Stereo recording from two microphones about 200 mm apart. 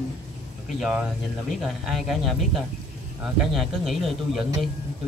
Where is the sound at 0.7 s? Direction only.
5° right (ahead or behind).